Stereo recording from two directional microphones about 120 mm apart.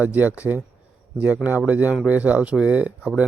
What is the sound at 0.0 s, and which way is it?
Speech, 15° right (ahead or behind).